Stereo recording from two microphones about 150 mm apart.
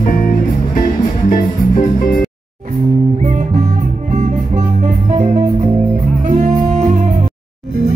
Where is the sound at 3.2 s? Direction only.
50° right (ahead or behind).